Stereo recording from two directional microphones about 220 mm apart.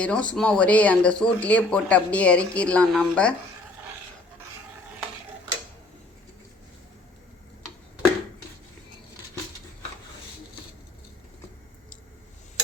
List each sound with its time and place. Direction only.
0.0 s speech: 5° left (ahead or behind)